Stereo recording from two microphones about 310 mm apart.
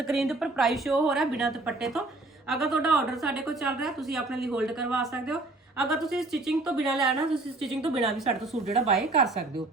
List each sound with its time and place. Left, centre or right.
0.0 s a woman's voice: centre
8.3 s speech: centre
8.8 s a woman's voice: centre